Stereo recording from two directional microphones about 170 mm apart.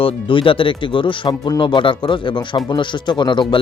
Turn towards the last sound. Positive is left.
turn(degrees=25)  # may be behind; listen again after turning